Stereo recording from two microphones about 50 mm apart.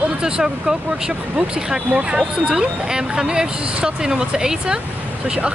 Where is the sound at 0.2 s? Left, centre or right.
Centre.